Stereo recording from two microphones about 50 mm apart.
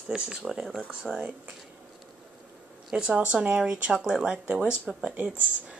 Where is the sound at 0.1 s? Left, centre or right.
Centre.